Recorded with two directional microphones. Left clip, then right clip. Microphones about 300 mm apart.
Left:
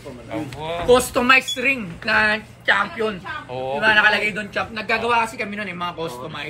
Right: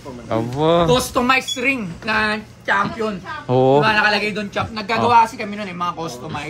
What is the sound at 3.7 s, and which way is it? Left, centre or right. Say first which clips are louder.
A woman's voice: right 1 dB; right.